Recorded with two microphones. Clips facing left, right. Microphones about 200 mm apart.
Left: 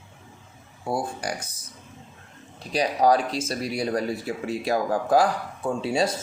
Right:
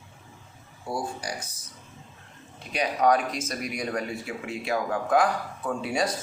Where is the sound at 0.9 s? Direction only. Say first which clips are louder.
Left 4 dB; 55° left (ahead or behind).